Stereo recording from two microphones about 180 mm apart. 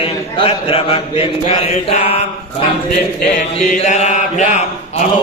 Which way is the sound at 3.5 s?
40° left (ahead or behind).